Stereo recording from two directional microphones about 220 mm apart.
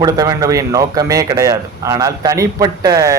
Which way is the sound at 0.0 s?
15° right (ahead or behind).